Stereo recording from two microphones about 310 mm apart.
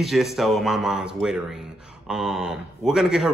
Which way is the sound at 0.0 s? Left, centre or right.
Centre.